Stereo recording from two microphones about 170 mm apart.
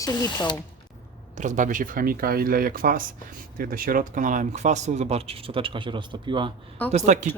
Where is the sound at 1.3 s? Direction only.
45° right (ahead or behind); by 6.5 s 30° right (ahead or behind).